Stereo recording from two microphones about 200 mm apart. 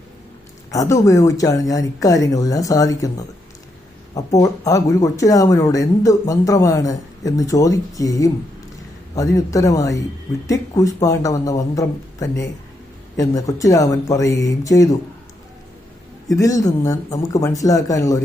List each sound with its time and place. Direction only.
0.7 s speech: 15° left (ahead or behind)
16.3 s speech: 15° left (ahead or behind)